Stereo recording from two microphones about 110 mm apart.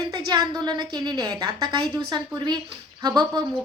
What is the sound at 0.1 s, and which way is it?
A woman's voice, 40° right (ahead or behind).